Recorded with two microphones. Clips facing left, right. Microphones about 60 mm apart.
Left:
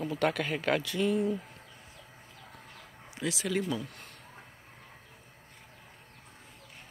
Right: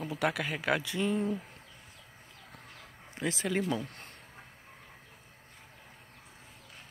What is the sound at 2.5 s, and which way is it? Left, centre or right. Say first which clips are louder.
Chicken: right 1 dB; centre.